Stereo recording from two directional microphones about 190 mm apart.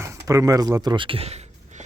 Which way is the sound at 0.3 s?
20° right (ahead or behind).